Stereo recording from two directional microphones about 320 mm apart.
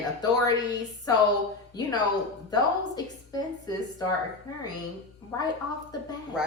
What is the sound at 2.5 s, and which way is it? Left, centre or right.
Speech, centre.